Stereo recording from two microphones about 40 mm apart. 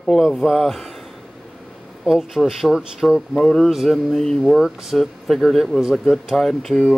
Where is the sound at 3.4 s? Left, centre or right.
Centre.